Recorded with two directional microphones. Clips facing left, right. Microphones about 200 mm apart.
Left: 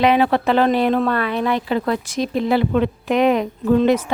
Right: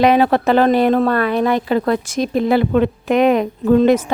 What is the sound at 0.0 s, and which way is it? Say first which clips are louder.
Speech: right 3 dB; 45° right (ahead or behind).